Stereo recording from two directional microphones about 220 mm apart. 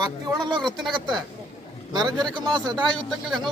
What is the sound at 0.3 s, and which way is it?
A man's voice, 20° right (ahead or behind).